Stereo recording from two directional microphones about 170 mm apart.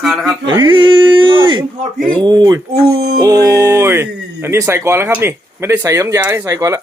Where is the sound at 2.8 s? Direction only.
70° right (ahead or behind).